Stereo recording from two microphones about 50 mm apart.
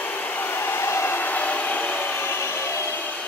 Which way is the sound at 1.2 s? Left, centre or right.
Left.